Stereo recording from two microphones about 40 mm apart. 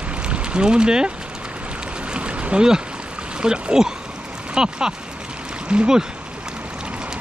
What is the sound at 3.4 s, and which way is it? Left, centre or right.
Speech, right.